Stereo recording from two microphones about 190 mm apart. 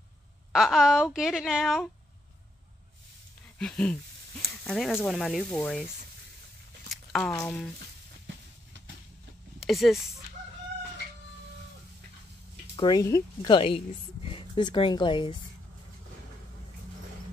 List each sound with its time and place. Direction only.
0.5 s a woman's voice: centre (ahead or behind)
3.5 s a sound: 5° left (ahead or behind)
4.6 s a woman's voice: centre (ahead or behind)
6.9 s a sound: 5° left (ahead or behind)
7.3 s speech: 10° left (ahead or behind)
9.6 s speech: centre (ahead or behind)
12.7 s a woman's voice: 20° left (ahead or behind)